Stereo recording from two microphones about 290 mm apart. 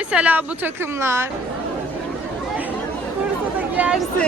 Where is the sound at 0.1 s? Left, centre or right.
Centre.